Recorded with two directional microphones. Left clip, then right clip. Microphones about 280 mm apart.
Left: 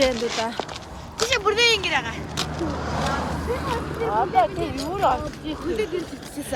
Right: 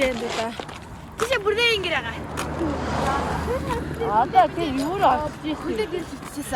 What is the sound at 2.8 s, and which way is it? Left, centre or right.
Speech, right.